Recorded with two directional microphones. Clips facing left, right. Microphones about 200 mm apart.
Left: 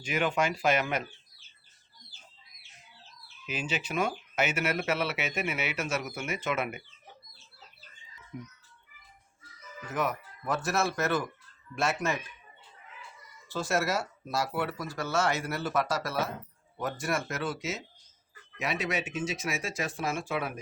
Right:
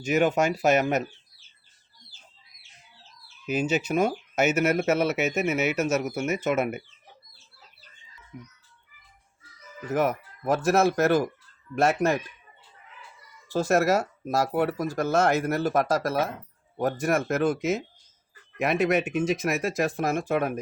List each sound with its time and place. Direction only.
0.0 s speech: 45° right (ahead or behind)
3.4 s speech: 45° right (ahead or behind)
8.3 s speech: centre (ahead or behind)
9.9 s speech: 50° right (ahead or behind)
11.7 s speech: 55° right (ahead or behind)
13.5 s speech: 40° right (ahead or behind)
17.2 s speech: 50° right (ahead or behind)
19.6 s speech: 45° right (ahead or behind)